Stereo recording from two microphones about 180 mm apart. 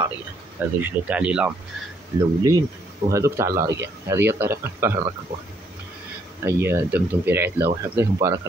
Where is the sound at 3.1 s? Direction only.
15° right (ahead or behind).